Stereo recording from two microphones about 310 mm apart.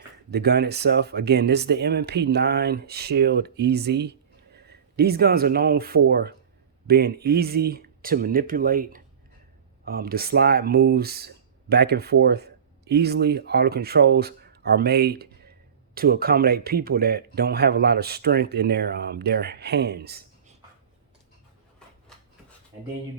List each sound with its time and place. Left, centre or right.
0.3 s speech: right